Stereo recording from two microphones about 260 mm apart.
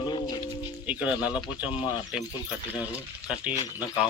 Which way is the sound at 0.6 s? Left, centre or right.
Centre.